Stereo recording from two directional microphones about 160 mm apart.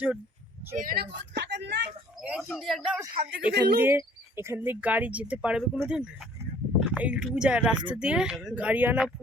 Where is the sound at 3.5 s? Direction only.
85° right.